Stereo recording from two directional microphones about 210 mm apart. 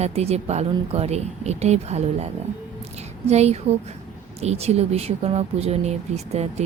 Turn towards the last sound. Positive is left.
turn(degrees=-30)  # may be behind; listen again after turning